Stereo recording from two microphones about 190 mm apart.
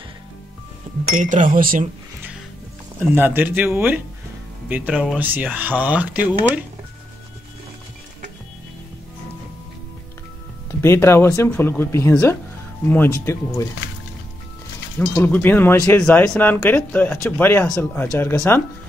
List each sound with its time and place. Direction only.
1.1 s speech: 40° right (ahead or behind)
3.0 s speech: 10° right (ahead or behind)
10.8 s speech: 15° left (ahead or behind)
15.0 s speech: 10° left (ahead or behind)